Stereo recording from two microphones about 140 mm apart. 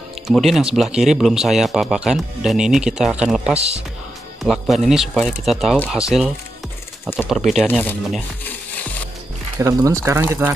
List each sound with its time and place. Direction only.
0.3 s speech: centre (ahead or behind)
3.5 s speech: 50° right (ahead or behind)
4.4 s speech: centre (ahead or behind)
9.6 s speech: 20° right (ahead or behind)